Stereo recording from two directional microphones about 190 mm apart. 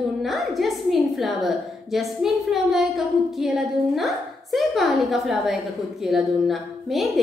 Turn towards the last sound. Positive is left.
turn(degrees=0)  # may be behind; listen again after turning